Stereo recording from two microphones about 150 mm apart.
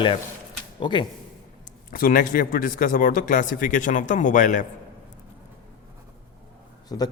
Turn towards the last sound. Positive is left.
turn(degrees=25)  # may be behind; listen again after turning